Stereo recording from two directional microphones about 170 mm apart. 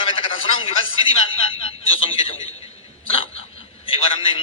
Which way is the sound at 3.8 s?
30° left (ahead or behind).